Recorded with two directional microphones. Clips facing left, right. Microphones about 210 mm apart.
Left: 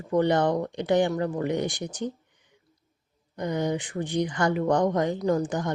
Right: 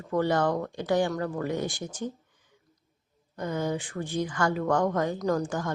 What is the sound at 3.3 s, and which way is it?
Speech, 15° left (ahead or behind).